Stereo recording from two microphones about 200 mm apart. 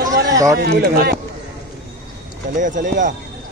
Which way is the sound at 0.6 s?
50° right (ahead or behind).